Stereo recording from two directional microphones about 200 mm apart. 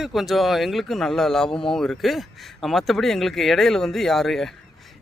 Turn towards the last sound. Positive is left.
turn(degrees=0)  # may be behind; listen again after turning